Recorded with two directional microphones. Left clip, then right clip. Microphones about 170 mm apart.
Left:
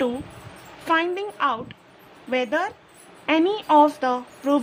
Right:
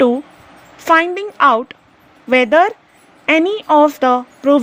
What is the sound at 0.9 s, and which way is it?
A woman's voice, 35° right (ahead or behind).